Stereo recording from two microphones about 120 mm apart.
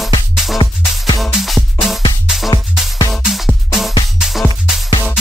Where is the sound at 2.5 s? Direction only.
35° left (ahead or behind).